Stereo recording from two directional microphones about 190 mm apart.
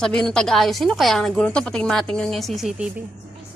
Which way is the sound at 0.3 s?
5° left (ahead or behind).